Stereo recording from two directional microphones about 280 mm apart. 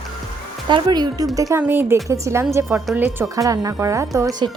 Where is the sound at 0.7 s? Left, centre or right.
Centre.